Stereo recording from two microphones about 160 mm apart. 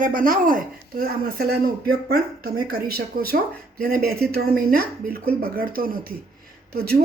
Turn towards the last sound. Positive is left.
turn(degrees=-75)  # may be behind; listen again after turning